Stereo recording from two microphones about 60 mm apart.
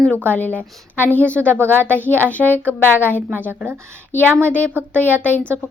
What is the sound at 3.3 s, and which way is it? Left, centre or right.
Speech, right.